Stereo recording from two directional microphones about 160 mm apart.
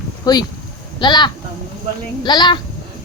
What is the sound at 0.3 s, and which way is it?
Speech, 25° left (ahead or behind).